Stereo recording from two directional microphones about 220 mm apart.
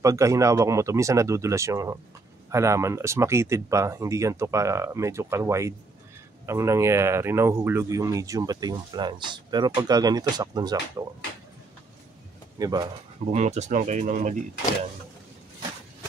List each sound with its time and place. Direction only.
0.0 s speech: 15° right (ahead or behind)
12.5 s speech: 20° right (ahead or behind)
13.3 s speech: 30° right (ahead or behind)